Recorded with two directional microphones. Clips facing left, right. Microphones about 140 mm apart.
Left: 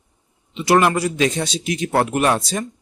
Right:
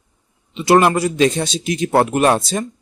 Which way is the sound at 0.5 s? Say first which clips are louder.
Right 3 dB; 25° right (ahead or behind).